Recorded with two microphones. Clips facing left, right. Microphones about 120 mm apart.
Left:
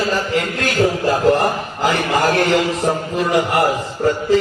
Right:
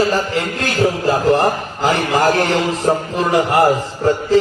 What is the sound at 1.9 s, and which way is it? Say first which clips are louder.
A man's voice: right 2 dB; 35° right (ahead or behind).